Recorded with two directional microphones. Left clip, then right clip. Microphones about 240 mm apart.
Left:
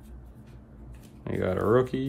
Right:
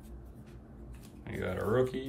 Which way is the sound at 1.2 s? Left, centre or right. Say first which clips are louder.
Left 8 dB; centre.